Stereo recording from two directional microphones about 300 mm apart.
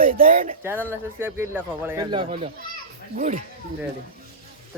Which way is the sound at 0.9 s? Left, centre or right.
Centre.